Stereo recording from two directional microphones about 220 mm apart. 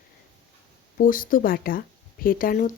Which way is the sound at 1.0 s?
40° left (ahead or behind).